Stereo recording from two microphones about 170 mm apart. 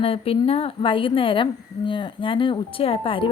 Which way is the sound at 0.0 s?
35° left (ahead or behind).